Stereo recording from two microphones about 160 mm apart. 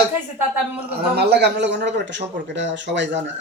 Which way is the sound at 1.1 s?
90° right.